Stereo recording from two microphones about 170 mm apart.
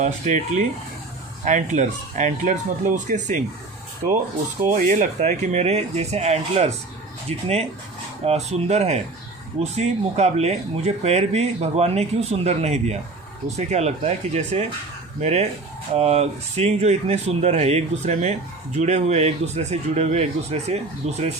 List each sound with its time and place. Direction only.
0.0 s speech: 45° right (ahead or behind)
4.7 s speech: 50° right (ahead or behind)